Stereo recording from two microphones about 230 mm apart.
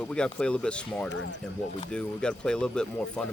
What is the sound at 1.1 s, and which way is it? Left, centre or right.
Speech, left.